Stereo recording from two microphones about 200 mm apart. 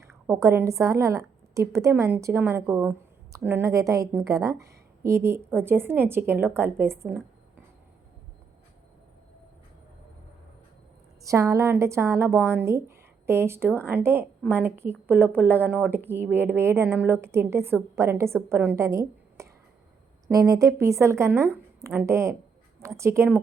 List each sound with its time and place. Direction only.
0.3 s a woman's voice: 15° right (ahead or behind)
11.2 s a woman's voice: 15° right (ahead or behind)